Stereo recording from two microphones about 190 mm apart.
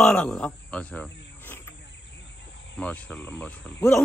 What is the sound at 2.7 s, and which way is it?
Speech, 5° left (ahead or behind).